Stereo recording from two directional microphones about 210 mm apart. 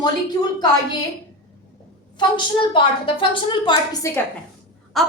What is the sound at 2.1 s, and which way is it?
A woman's voice, 25° left (ahead or behind).